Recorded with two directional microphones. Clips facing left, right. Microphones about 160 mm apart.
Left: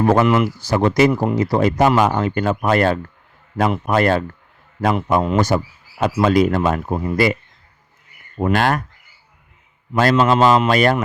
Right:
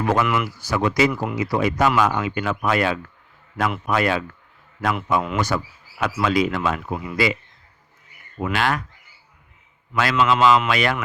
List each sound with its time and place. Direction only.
0.0 s a man's voice: 35° left (ahead or behind)
8.4 s a man's voice: 45° left (ahead or behind)
9.9 s a man's voice: 45° left (ahead or behind)